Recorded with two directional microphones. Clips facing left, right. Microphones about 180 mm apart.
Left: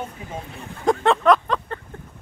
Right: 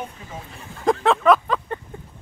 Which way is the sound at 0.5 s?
Centre (ahead or behind).